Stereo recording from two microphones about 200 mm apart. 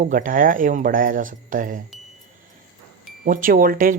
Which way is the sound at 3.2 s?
45° right (ahead or behind).